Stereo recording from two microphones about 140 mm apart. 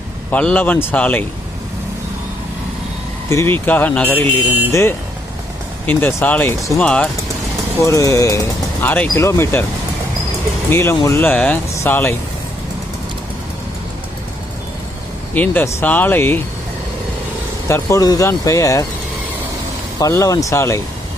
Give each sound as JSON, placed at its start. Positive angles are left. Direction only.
{"t": 0.3, "sound": "speech", "side_deg": 10}
{"t": 3.2, "sound": "speech", "side_deg": 15}
{"t": 7.9, "sound": "speech", "side_deg": 20}
{"t": 10.7, "sound": "speech", "side_deg": 20}
{"t": 15.4, "sound": "speech", "side_deg": 15}
{"t": 17.7, "sound": "speech", "side_deg": 20}
{"t": 20.0, "sound": "speech", "side_deg": 25}